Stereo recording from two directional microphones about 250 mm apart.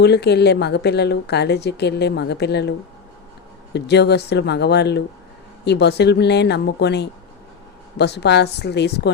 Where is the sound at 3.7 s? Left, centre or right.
Left.